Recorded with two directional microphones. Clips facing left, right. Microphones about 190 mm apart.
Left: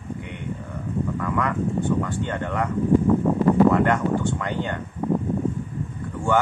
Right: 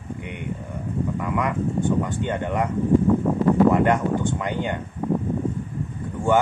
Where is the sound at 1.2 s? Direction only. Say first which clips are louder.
Even; 15° right (ahead or behind).